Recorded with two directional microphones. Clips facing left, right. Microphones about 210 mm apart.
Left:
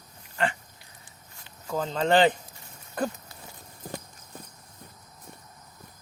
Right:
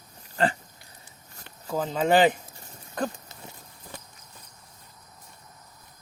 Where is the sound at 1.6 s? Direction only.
5° right (ahead or behind).